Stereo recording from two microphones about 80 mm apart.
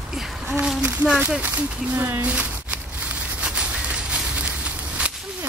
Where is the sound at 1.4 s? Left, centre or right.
Right.